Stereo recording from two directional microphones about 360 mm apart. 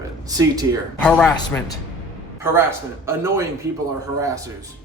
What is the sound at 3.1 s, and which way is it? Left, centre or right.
Speech, centre.